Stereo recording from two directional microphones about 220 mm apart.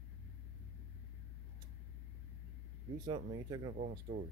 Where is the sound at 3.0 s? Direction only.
20° right (ahead or behind).